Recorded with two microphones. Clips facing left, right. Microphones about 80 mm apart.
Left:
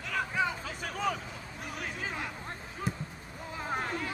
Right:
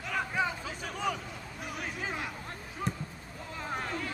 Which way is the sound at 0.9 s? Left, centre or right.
Left.